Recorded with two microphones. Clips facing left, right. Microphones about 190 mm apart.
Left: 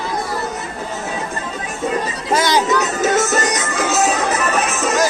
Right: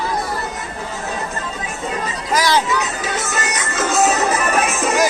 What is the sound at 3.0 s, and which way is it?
Music, 45° left (ahead or behind).